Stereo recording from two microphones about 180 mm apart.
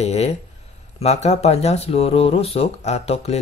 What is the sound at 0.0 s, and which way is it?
Speech, 35° left (ahead or behind).